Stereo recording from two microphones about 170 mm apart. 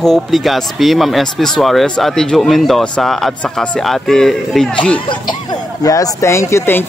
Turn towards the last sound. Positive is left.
turn(degrees=15)  # may be behind; listen again after turning